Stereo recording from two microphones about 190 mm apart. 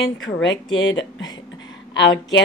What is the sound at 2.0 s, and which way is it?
Speech, 70° left (ahead or behind).